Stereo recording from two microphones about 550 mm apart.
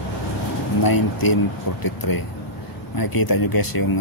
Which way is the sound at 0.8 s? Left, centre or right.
Left.